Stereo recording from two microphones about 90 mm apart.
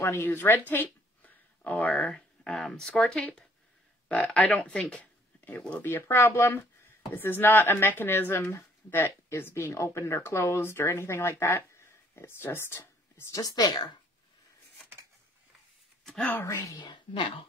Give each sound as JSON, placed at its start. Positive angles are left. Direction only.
{"t": 0.0, "sound": "speech", "side_deg": 30}
{"t": 13.4, "sound": "a woman's voice", "side_deg": 50}
{"t": 16.0, "sound": "a sound", "side_deg": 5}
{"t": 16.3, "sound": "speech", "side_deg": 25}
{"t": 16.7, "sound": "speech", "side_deg": 55}